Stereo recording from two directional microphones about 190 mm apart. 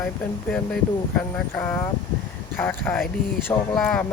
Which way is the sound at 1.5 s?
10° left (ahead or behind).